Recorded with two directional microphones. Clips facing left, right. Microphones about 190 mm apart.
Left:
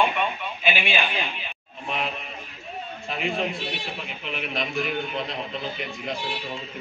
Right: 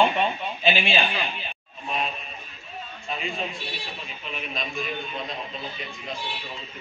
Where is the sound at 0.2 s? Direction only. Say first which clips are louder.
Right 2 dB; 30° right (ahead or behind).